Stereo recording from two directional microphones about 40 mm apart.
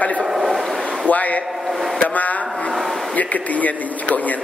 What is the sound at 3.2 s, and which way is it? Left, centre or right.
A man's voice, left.